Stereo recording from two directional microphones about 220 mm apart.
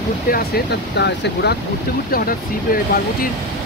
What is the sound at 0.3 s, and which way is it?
Speech, 40° left (ahead or behind).